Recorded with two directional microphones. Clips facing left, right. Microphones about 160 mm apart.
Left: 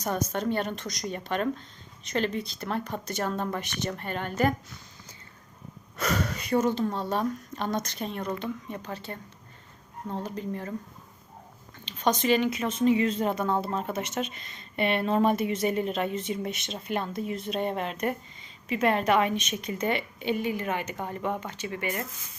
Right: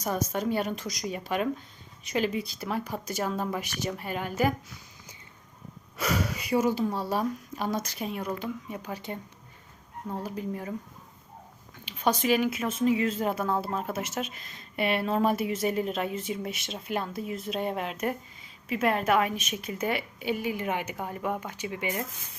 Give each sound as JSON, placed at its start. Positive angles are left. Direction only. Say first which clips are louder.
{"t": 0.0, "sound": "speech", "louder": "even", "side_deg": -5}
{"t": 6.0, "sound": "speech", "louder": "even", "side_deg": -5}
{"t": 11.9, "sound": "speech", "louder": "left 1 dB", "side_deg": -5}